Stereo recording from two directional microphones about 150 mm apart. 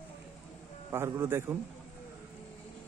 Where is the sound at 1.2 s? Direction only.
15° right (ahead or behind).